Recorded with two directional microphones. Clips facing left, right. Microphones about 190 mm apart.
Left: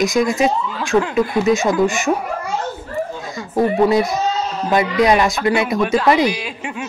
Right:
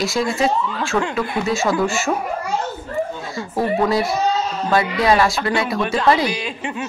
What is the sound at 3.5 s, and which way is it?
A woman's voice, 15° left (ahead or behind).